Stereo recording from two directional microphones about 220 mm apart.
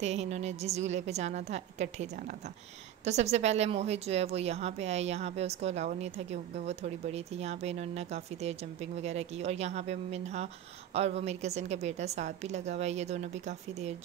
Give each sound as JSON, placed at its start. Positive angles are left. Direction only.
{"t": 0.0, "sound": "a woman's voice", "side_deg": -30}